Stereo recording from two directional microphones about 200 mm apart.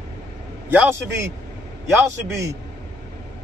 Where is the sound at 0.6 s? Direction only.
10° right (ahead or behind).